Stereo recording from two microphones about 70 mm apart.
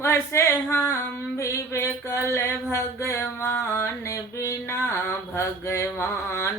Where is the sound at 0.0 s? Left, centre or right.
Left.